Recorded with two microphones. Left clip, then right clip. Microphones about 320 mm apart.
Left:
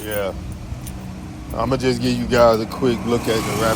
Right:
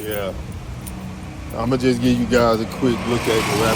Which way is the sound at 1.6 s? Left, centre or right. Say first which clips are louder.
Even; centre.